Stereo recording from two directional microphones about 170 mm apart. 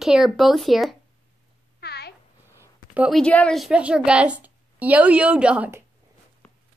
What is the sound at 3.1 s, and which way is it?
A woman's voice, 5° left (ahead or behind).